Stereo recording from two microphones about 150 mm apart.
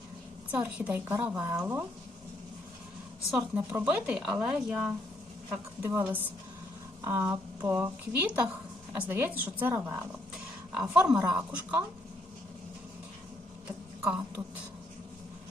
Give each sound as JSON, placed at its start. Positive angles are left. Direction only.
{"t": 0.5, "sound": "speech", "side_deg": -10}
{"t": 3.3, "sound": "speech", "side_deg": -5}
{"t": 8.4, "sound": "a sound", "side_deg": -5}
{"t": 9.1, "sound": "a woman's voice", "side_deg": -15}
{"t": 14.0, "sound": "speech", "side_deg": -10}